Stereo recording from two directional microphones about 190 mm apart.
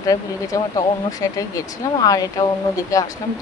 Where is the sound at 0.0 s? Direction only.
20° left (ahead or behind).